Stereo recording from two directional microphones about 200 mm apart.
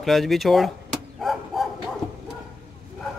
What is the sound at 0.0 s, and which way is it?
Speech, centre (ahead or behind).